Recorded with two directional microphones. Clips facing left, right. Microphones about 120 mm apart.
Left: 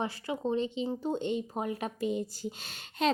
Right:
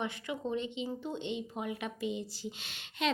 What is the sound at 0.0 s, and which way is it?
A woman's voice, 35° left (ahead or behind).